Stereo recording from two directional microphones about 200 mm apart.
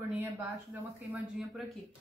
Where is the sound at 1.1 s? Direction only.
Centre (ahead or behind).